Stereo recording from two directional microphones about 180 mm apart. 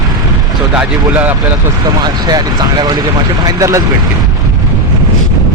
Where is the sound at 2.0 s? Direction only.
20° right (ahead or behind).